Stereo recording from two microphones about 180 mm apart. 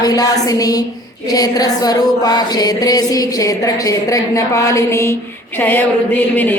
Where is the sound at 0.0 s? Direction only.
20° left (ahead or behind).